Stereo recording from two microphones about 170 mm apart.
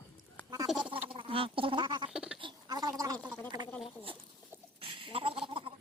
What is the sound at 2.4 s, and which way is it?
Gargling, 20° right (ahead or behind).